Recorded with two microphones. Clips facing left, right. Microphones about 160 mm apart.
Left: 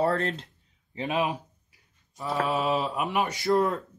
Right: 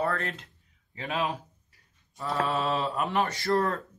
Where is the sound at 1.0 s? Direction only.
15° left (ahead or behind).